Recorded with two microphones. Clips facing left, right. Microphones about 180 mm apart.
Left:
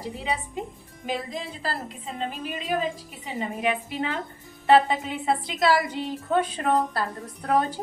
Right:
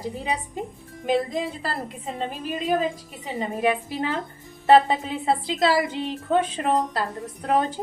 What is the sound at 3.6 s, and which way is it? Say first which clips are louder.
A woman's voice: right 4 dB; 35° right (ahead or behind).